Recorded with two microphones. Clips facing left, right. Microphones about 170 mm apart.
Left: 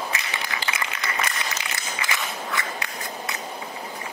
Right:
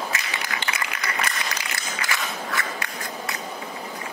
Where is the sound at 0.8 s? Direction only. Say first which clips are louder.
Even; 25° left (ahead or behind).